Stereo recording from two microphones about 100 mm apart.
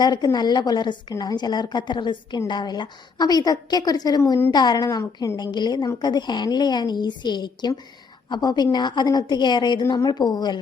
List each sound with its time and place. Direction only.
0.0 s a woman's voice: 45° left (ahead or behind)
5.5 s a woman's voice: 45° left (ahead or behind)